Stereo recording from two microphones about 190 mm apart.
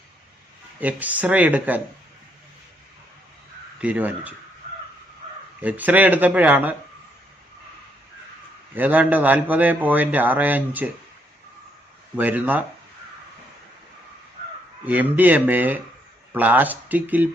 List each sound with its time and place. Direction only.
0.8 s a man's voice: 10° right (ahead or behind)
3.8 s a man's voice: 5° right (ahead or behind)
5.6 s a man's voice: 10° right (ahead or behind)
8.7 s a man's voice: 10° right (ahead or behind)
12.1 s a man's voice: 10° right (ahead or behind)
14.8 s a man's voice: 10° right (ahead or behind)